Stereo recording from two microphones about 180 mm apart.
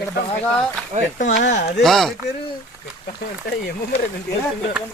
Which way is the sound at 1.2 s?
45° left (ahead or behind).